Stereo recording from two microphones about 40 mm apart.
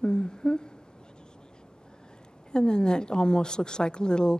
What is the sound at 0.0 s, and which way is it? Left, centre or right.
Humming, left.